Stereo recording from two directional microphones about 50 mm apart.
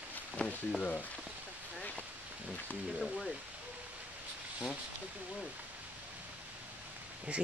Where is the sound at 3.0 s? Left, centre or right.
Centre.